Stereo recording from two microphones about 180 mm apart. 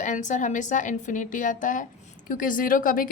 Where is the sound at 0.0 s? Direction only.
45° left (ahead or behind).